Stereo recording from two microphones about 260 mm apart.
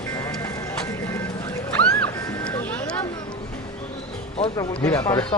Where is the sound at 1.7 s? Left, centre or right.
Centre.